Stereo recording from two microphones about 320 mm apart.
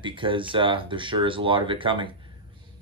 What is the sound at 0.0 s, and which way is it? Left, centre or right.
Speech, centre.